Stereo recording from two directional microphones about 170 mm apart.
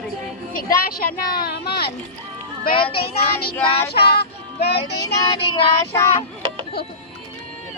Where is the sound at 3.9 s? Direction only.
70° left (ahead or behind).